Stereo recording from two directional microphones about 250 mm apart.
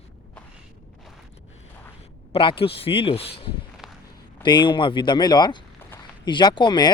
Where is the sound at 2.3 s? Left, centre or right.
Left.